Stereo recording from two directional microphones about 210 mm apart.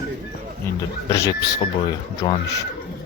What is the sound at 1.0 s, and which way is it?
Speech, 15° left (ahead or behind).